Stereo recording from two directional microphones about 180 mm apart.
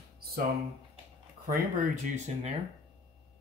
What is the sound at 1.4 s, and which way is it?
Speech, 50° right (ahead or behind).